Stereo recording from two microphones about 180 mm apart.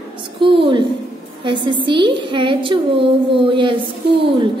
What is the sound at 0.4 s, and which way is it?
A woman's voice, 30° right (ahead or behind).